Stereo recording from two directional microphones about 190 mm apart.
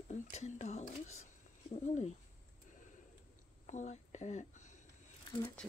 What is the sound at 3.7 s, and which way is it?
Speech, 40° left (ahead or behind).